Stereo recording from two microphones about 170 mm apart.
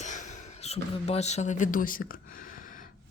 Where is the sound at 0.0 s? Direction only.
45° left (ahead or behind).